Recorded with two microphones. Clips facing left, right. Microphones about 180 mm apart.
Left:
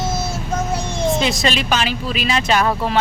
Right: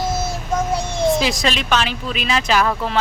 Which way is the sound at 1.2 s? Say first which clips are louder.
Left 1 dB; centre (ahead or behind).